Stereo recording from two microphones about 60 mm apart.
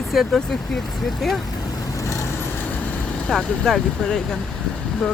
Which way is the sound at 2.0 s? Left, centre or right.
Left.